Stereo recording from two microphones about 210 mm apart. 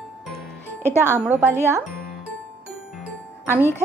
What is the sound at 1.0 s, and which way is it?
Speech, 10° right (ahead or behind).